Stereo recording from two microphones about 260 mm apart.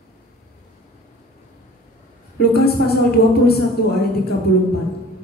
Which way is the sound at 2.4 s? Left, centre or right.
Left.